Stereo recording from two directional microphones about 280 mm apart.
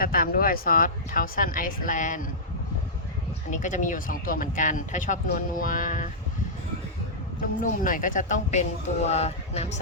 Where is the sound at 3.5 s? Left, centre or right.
Left.